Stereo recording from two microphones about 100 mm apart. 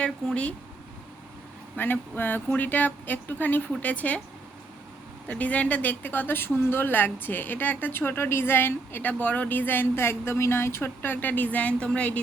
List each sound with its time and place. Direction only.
0.0 s speech: 10° left (ahead or behind)
1.7 s a woman's voice: 20° left (ahead or behind)
5.3 s a woman's voice: 15° left (ahead or behind)